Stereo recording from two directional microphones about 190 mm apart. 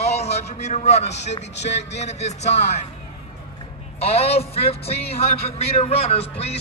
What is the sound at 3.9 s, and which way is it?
Speech, 30° left (ahead or behind).